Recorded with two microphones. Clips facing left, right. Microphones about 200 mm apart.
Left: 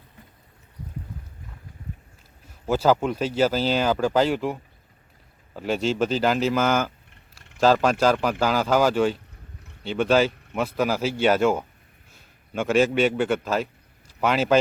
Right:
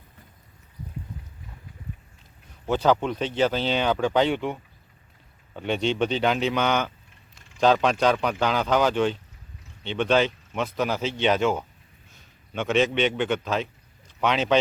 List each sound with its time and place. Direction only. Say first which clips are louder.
2.6 s speech: left 1 dB; 5° left (ahead or behind)
7.1 s a sound: left 1 dB; 65° left (ahead or behind)
7.6 s a man's voice: left 1 dB; 5° left (ahead or behind)